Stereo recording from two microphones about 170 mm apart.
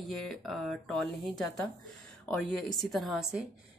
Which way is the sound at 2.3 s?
5° left (ahead or behind).